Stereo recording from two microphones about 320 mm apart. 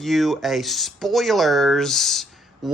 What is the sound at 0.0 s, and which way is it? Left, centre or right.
Speech, centre.